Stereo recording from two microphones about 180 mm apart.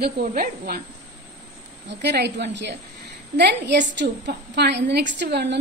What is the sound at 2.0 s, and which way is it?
A woman's voice, 70° right (ahead or behind).